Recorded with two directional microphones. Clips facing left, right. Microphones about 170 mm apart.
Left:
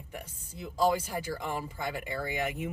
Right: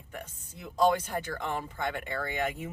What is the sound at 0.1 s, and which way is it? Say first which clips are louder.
Speech: right 2 dB; 5° left (ahead or behind).